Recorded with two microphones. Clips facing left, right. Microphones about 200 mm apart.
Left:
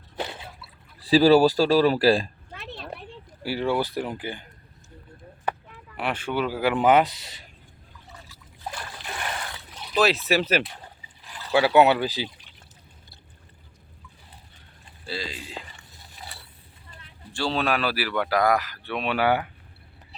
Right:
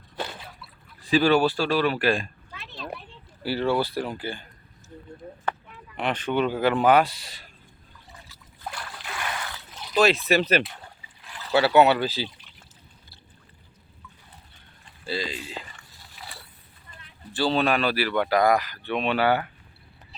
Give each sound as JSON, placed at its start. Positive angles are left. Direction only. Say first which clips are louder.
{"t": 1.0, "sound": "speech", "louder": "left 4 dB", "side_deg": 35}
{"t": 2.5, "sound": "a sound", "louder": "left 4 dB", "side_deg": 55}
{"t": 3.4, "sound": "speech", "louder": "right 1 dB", "side_deg": 15}
{"t": 6.0, "sound": "speech", "louder": "right 2 dB", "side_deg": 10}
{"t": 9.9, "sound": "speech", "louder": "right 1 dB", "side_deg": 5}
{"t": 15.0, "sound": "speech", "louder": "right 3 dB", "side_deg": 0}
{"t": 17.3, "sound": "speech", "louder": "right 2 dB", "side_deg": 0}